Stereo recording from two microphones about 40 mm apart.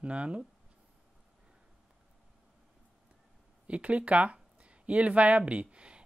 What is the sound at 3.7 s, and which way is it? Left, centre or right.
Speech, right.